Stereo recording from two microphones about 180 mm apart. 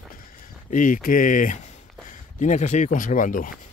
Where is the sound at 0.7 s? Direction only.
45° left (ahead or behind).